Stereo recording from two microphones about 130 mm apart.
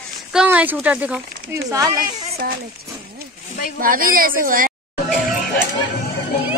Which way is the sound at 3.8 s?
90° right.